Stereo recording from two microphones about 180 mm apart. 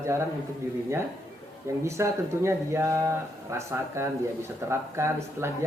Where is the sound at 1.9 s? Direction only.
15° right (ahead or behind).